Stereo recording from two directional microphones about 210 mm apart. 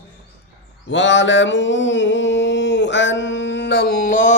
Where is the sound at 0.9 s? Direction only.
60° left (ahead or behind); by 4.4 s 35° left (ahead or behind).